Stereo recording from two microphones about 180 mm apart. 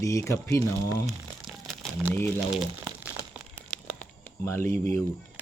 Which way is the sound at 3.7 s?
10° left (ahead or behind).